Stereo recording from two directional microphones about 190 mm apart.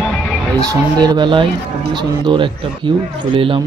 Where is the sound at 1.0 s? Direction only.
25° right (ahead or behind).